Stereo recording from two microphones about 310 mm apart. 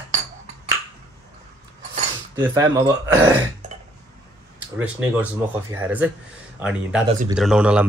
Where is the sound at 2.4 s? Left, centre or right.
Centre.